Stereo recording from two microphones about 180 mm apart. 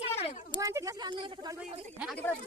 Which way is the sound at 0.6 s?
20° right (ahead or behind).